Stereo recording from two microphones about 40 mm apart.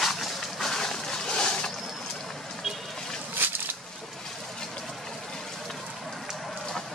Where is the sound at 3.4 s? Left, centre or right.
Right.